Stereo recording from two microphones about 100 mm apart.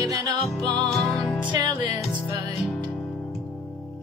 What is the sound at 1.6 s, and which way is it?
Music, 40° right (ahead or behind).